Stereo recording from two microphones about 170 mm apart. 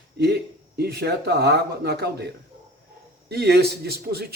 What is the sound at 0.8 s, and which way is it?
Speech, 75° right (ahead or behind).